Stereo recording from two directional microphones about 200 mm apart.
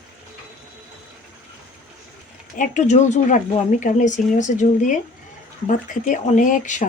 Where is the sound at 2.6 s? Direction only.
35° left (ahead or behind).